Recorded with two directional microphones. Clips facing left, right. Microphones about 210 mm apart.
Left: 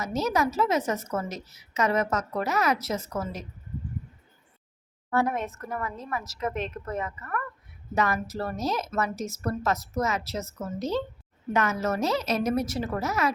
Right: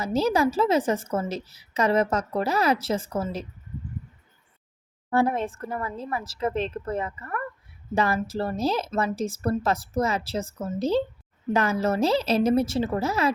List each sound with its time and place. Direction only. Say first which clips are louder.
0.0 s a woman's voice: right 4 dB; 30° right (ahead or behind)
5.1 s a woman's voice: right 3 dB; 30° right (ahead or behind)